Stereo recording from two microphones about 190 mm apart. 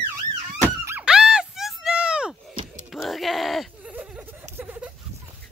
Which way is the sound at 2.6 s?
40° right (ahead or behind).